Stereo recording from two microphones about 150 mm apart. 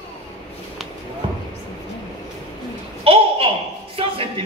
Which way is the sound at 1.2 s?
35° right (ahead or behind).